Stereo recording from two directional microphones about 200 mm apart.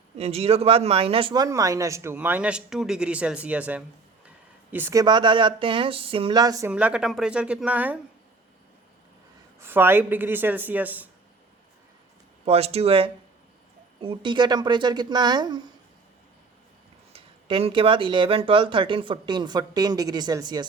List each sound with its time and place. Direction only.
0.2 s speech: 30° right (ahead or behind)
6.7 s a woman's voice: 5° right (ahead or behind)
9.6 s speech: 10° right (ahead or behind)
12.5 s speech: 30° right (ahead or behind)
17.1 s speech: 30° right (ahead or behind)